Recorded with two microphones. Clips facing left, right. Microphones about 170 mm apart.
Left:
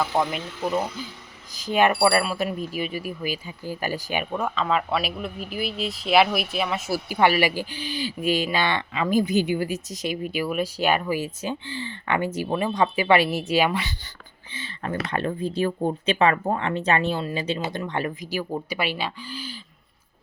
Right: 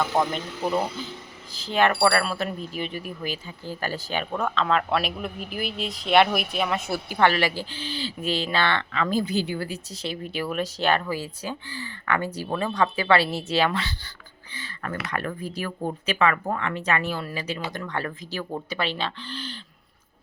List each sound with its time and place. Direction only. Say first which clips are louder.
0.0 s speech: even; 5° left (ahead or behind)
1.5 s speech: left 2 dB; 15° left (ahead or behind)